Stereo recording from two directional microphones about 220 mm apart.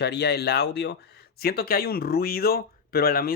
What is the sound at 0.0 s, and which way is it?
Speech, 50° left (ahead or behind).